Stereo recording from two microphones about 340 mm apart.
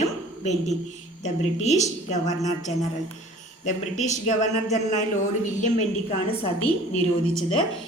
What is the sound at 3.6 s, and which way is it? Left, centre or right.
Speech, left.